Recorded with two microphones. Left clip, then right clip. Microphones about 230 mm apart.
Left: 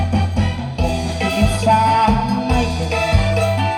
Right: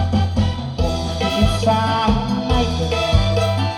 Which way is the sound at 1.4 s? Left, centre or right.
Left.